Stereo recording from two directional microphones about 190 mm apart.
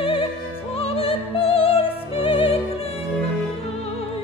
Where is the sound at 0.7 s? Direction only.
30° left (ahead or behind).